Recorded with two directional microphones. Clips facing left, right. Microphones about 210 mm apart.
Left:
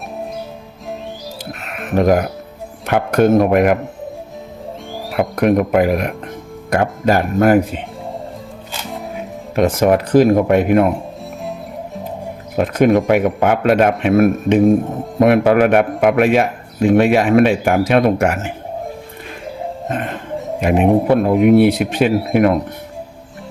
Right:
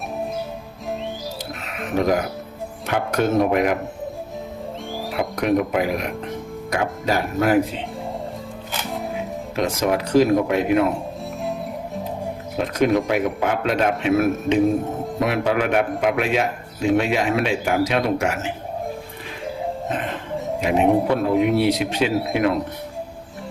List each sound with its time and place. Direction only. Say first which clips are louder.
1.6 s a man's voice: left 6 dB; 55° left (ahead or behind)
5.1 s speech: left 6 dB; 55° left (ahead or behind)
8.9 s music: even; centre (ahead or behind)
9.6 s a man's voice: left 8 dB; 55° left (ahead or behind)
12.5 s a man's voice: left 6 dB; 55° left (ahead or behind)
20.6 s a man's voice: left 4 dB; 55° left (ahead or behind)